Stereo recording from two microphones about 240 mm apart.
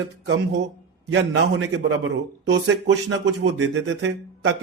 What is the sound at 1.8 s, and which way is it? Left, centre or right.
A man's voice, right.